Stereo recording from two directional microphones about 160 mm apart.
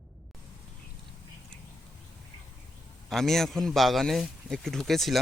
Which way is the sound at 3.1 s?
Centre (ahead or behind).